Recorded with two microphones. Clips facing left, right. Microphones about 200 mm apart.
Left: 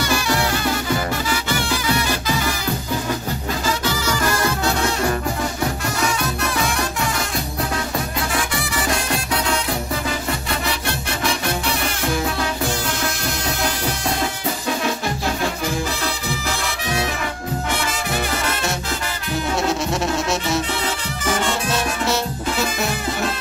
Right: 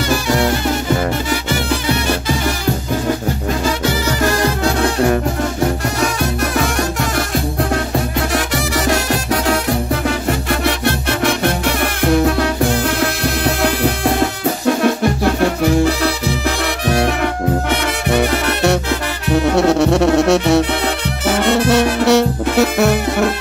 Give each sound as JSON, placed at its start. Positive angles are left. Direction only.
{"t": 6.6, "sound": "music", "side_deg": -60}
{"t": 8.3, "sound": "music", "side_deg": -70}
{"t": 10.0, "sound": "music", "side_deg": -60}